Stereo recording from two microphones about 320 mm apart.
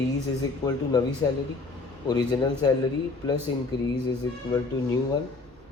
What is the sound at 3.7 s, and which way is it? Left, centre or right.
Speech, centre.